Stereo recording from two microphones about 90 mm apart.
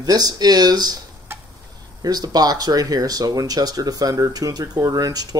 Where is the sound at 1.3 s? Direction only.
25° right (ahead or behind).